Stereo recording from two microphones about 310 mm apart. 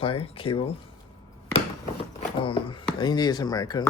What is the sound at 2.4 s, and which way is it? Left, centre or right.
Speech, centre.